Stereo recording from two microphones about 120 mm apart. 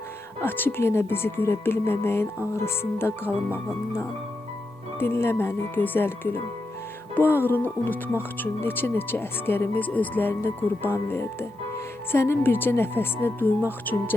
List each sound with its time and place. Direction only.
0.4 s speech: 15° left (ahead or behind)
4.9 s speech: 20° left (ahead or behind)